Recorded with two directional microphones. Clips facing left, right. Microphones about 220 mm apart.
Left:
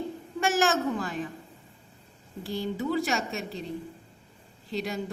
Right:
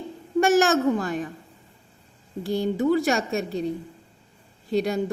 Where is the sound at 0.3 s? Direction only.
45° right (ahead or behind).